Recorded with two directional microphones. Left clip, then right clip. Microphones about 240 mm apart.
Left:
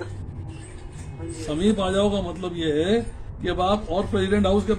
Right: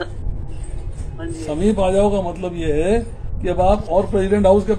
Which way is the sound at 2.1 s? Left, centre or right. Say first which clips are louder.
Right 6 dB; centre.